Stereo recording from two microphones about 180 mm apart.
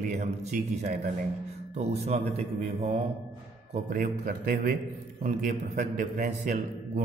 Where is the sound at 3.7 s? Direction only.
50° right (ahead or behind).